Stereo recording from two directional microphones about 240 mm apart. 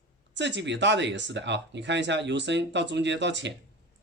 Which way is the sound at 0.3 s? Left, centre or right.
Right.